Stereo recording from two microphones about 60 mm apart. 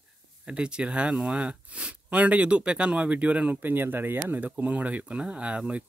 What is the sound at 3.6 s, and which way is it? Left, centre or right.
Speech, right.